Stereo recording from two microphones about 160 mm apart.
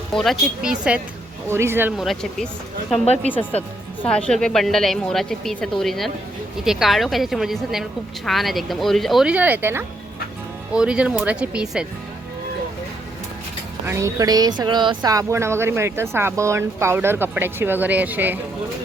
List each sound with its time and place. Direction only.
0.1 s a woman's voice: centre (ahead or behind); by 1.9 s 15° right (ahead or behind)
2.0 s a woman's voice: centre (ahead or behind)
13.8 s speech: 20° right (ahead or behind)